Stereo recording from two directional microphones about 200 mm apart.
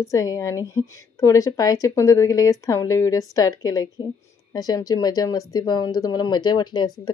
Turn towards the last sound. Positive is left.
turn(degrees=20)  # may be behind; listen again after turning